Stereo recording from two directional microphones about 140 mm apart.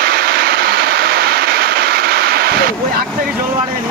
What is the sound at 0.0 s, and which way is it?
Vehicle, 90° right.